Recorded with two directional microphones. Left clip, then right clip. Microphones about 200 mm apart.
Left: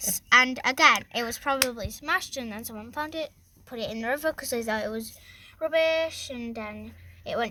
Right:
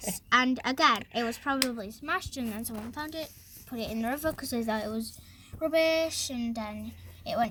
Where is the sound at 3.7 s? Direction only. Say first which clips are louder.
Left 4 dB; 45° left (ahead or behind).